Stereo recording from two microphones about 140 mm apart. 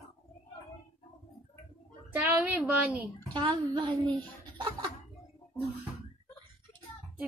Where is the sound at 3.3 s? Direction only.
35° right (ahead or behind).